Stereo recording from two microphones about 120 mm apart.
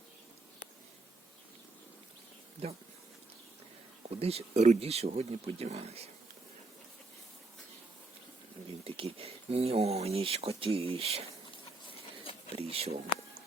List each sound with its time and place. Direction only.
2.6 s speech: 55° right (ahead or behind)
4.1 s speech: 60° right (ahead or behind)
8.8 s speech: 50° right (ahead or behind)
12.5 s speech: 60° right (ahead or behind)